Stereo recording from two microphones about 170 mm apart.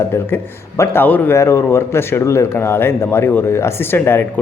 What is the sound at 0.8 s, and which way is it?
Speech, 10° left (ahead or behind).